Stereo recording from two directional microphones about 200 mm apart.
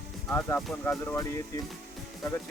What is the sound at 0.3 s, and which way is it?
Music, 10° left (ahead or behind).